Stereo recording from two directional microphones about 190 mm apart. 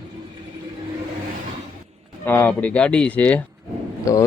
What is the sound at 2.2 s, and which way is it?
Speech, 10° left (ahead or behind).